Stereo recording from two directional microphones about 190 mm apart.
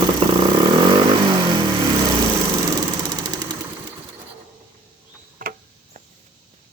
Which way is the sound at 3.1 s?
20° right (ahead or behind).